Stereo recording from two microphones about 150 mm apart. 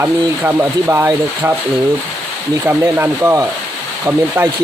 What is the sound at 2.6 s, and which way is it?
Speech, 15° right (ahead or behind).